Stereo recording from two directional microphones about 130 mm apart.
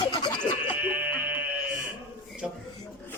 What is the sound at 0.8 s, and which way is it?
Sheep, 10° right (ahead or behind).